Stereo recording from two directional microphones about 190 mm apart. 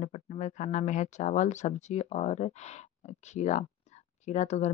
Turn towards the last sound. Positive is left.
turn(degrees=35)  # may be behind; listen again after turning